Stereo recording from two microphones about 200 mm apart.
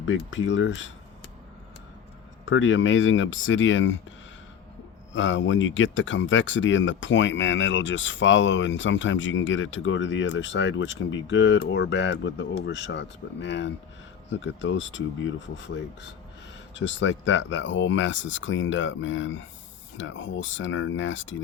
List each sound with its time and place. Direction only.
0.0 s speech: 70° left (ahead or behind)
2.5 s speech: 70° left (ahead or behind)
5.1 s speech: 70° left (ahead or behind)